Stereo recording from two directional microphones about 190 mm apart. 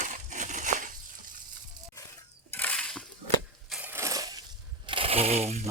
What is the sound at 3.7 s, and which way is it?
Crushing, 10° right (ahead or behind).